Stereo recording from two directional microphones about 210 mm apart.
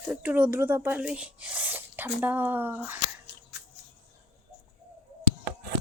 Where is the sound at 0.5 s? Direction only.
10° right (ahead or behind).